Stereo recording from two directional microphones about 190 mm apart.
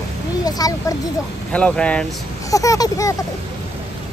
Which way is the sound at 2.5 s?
15° left (ahead or behind).